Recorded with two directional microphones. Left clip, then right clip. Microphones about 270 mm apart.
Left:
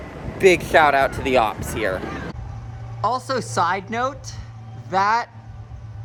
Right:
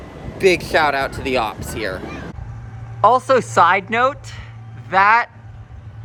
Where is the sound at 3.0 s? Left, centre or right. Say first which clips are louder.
Right 9 dB; centre.